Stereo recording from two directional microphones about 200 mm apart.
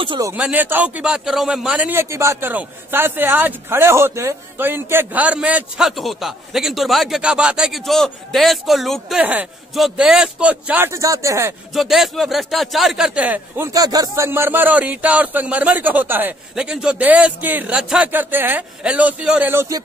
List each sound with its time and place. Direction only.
0.0 s speech: 25° right (ahead or behind)
0.3 s a man's voice: 5° right (ahead or behind)
11.7 s a man's voice: centre (ahead or behind)